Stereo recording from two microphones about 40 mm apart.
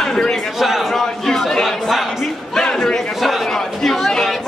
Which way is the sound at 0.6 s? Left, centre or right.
Centre.